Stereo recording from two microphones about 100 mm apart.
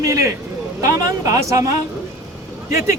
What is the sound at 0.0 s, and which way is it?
Speech, 30° right (ahead or behind).